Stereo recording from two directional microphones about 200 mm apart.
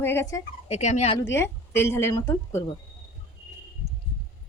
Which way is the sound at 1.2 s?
10° left (ahead or behind).